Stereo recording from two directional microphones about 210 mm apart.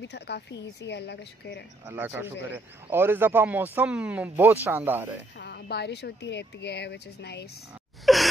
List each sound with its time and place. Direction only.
0.1 s a woman's voice: 55° left (ahead or behind)
1.9 s speech: 10° right (ahead or behind)
5.4 s speech: 50° left (ahead or behind)
8.0 s gasp: centre (ahead or behind)